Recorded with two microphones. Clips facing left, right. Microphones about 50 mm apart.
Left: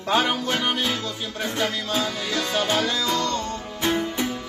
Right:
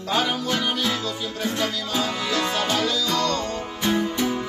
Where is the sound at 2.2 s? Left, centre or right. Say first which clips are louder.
Right 1 dB; right.